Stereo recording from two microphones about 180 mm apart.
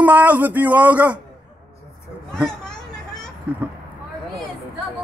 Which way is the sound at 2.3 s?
Centre (ahead or behind).